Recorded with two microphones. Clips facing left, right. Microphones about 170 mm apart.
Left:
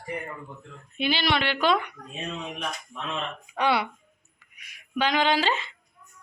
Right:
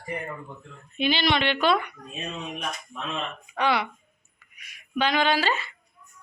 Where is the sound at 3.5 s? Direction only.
5° left (ahead or behind).